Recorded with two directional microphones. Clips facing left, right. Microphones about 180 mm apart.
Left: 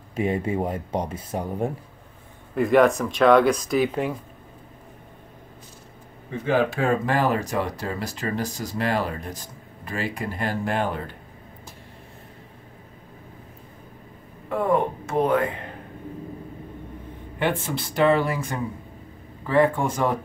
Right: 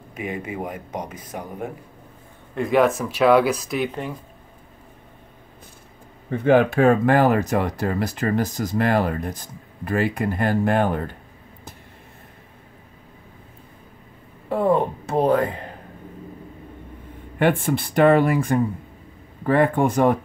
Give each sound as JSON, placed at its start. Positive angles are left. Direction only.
{"t": 0.1, "sound": "speech", "side_deg": 30}
{"t": 2.5, "sound": "speech", "side_deg": 0}
{"t": 6.3, "sound": "speech", "side_deg": -55}
{"t": 14.5, "sound": "a sound", "side_deg": -30}
{"t": 17.4, "sound": "speech", "side_deg": -55}